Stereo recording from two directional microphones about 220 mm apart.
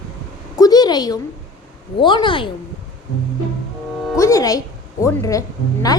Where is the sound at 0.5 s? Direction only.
15° left (ahead or behind).